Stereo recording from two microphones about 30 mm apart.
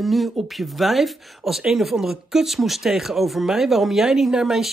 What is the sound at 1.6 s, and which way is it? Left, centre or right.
Speech, centre.